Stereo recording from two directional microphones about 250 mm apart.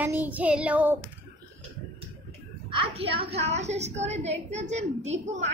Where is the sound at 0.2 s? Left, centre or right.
Centre.